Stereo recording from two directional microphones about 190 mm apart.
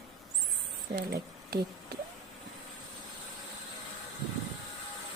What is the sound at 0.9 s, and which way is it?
Speech, 55° right (ahead or behind).